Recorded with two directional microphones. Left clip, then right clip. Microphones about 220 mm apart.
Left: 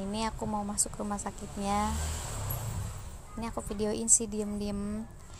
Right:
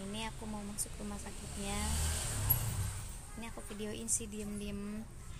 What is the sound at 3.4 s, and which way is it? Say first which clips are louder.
Speech: left 11 dB; 25° left (ahead or behind).